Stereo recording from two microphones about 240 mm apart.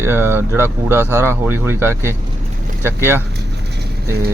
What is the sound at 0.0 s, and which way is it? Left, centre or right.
Speech, centre.